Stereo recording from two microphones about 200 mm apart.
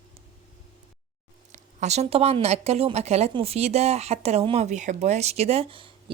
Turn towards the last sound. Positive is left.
turn(degrees=-25)  # may be behind; listen again after turning